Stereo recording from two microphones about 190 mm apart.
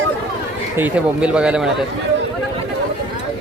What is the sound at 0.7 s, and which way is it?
Speech, 10° right (ahead or behind).